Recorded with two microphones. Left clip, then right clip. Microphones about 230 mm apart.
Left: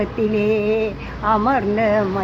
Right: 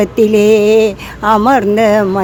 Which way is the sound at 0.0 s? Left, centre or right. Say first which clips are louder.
Right 10 dB; right.